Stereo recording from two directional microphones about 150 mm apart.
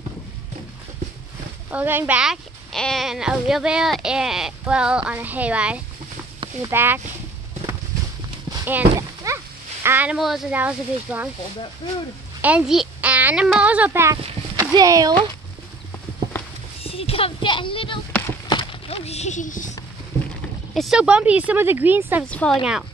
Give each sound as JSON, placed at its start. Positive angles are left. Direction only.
{"t": 1.7, "sound": "speech", "side_deg": -10}
{"t": 8.6, "sound": "horse", "side_deg": -15}
{"t": 9.8, "sound": "speech", "side_deg": -10}
{"t": 12.4, "sound": "a woman's voice", "side_deg": -10}
{"t": 14.1, "sound": "speech", "side_deg": -35}
{"t": 14.6, "sound": "speech", "side_deg": -25}
{"t": 16.8, "sound": "speech", "side_deg": 40}
{"t": 18.5, "sound": "a sound", "side_deg": 35}
{"t": 20.7, "sound": "speech", "side_deg": 0}
{"t": 22.3, "sound": "a woman's voice", "side_deg": 10}